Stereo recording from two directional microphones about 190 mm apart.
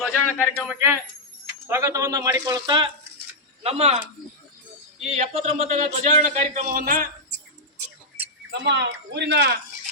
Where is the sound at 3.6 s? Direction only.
30° right (ahead or behind).